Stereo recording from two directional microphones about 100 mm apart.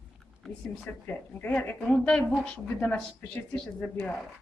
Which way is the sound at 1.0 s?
15° left (ahead or behind).